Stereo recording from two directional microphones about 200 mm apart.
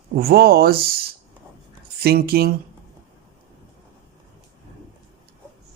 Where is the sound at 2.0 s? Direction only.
50° right (ahead or behind).